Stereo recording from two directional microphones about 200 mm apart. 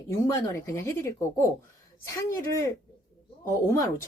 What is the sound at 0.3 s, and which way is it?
Speech, 15° left (ahead or behind).